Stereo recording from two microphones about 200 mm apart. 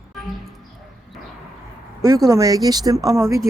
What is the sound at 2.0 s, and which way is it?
Speech, 15° right (ahead or behind).